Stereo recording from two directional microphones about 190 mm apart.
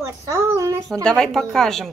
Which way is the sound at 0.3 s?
15° right (ahead or behind).